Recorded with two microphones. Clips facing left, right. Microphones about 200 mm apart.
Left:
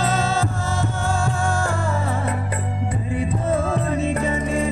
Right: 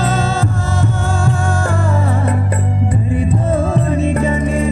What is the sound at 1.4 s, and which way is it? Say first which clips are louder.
Music: right 4 dB; 85° right.